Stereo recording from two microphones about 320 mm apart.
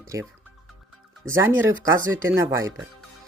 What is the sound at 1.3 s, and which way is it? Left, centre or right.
Speech, centre.